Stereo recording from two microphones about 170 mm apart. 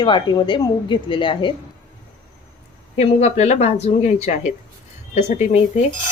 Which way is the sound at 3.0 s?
40° left (ahead or behind).